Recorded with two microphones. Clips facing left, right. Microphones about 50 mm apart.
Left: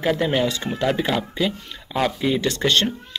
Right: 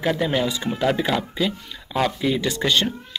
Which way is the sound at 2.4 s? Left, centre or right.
Centre.